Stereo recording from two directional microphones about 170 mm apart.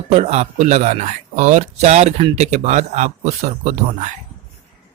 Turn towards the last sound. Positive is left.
turn(degrees=-45)  # may be behind; listen again after turning